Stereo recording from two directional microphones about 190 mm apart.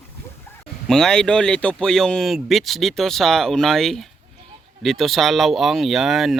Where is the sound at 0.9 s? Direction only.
5° left (ahead or behind).